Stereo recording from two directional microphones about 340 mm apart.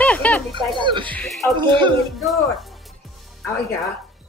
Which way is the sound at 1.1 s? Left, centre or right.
Centre.